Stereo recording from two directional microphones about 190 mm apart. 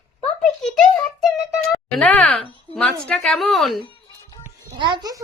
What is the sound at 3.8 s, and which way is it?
Music, 25° left (ahead or behind).